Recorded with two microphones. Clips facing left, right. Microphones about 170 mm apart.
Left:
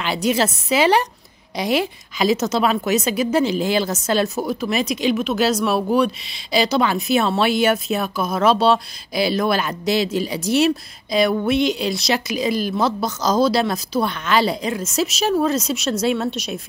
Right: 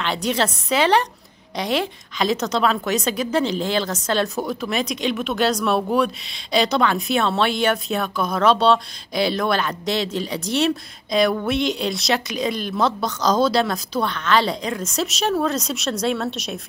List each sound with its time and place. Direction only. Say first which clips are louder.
0.0 s a woman's voice: left 2 dB; 5° left (ahead or behind)